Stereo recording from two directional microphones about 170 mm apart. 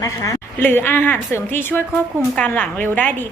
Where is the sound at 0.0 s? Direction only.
20° left (ahead or behind).